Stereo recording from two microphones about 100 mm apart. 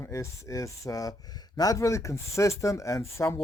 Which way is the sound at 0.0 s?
30° left (ahead or behind).